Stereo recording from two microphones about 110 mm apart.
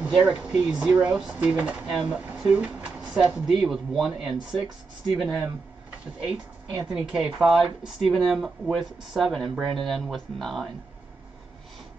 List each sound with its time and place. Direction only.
0.0 s speech: 10° right (ahead or behind)
6.3 s speech: 40° right (ahead or behind)
6.9 s speech: 5° right (ahead or behind)